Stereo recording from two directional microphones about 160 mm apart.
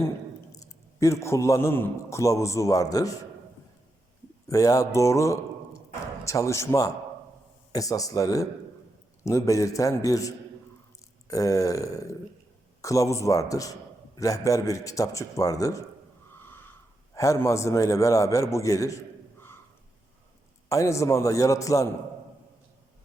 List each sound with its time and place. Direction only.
0.9 s a man's voice: 20° left (ahead or behind)
4.4 s a man's voice: 20° left (ahead or behind)
16.4 s a sound: 15° left (ahead or behind)
17.2 s a man's voice: 20° left (ahead or behind)
20.7 s a man's voice: 20° left (ahead or behind)